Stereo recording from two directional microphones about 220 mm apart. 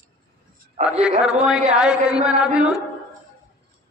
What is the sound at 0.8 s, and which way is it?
Speech, 30° right (ahead or behind).